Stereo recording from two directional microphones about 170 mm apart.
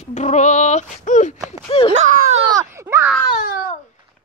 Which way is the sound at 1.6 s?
35° left (ahead or behind).